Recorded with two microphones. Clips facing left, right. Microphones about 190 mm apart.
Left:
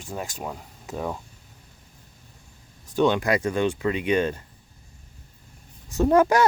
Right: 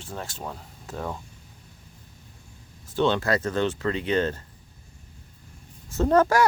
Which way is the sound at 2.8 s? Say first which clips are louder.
Left 2 dB; 15° left (ahead or behind).